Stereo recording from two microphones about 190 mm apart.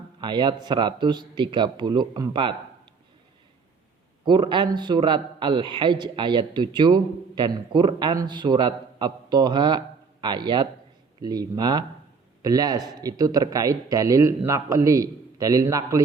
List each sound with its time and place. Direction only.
0.2 s a man's voice: 25° right (ahead or behind)
4.3 s a man's voice: 25° right (ahead or behind)